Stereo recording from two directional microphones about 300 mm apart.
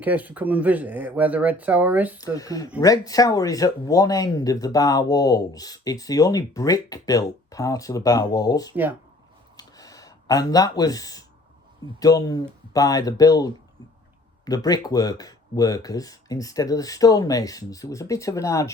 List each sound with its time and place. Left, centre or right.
0.0 s speech: centre
2.1 s speech: centre
9.6 s a sound: centre
11.9 s speech: centre